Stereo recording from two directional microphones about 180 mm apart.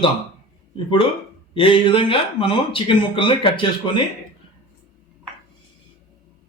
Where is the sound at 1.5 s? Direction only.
30° left (ahead or behind).